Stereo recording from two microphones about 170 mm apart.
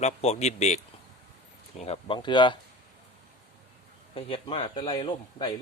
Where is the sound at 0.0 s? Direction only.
40° left (ahead or behind).